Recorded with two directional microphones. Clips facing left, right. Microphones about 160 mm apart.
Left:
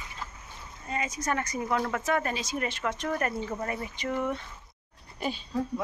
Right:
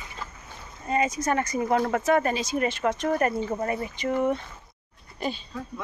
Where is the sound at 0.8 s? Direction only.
30° right (ahead or behind).